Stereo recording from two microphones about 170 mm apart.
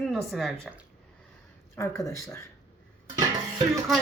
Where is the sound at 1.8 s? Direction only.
20° left (ahead or behind).